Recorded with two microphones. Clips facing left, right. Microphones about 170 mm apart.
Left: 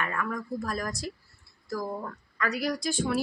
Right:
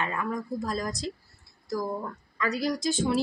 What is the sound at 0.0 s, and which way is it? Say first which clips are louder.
Speech: right 1 dB; 20° right (ahead or behind).